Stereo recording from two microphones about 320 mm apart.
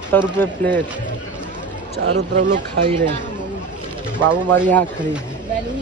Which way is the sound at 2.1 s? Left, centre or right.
Right.